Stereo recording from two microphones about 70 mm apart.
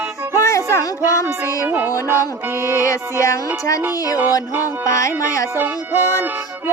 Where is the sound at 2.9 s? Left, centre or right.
Left.